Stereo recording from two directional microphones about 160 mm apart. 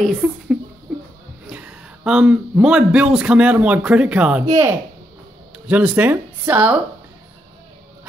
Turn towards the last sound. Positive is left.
turn(degrees=-10)  # may be behind; listen again after turning